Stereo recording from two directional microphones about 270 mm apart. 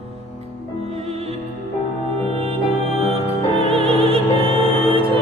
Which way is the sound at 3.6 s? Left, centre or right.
Right.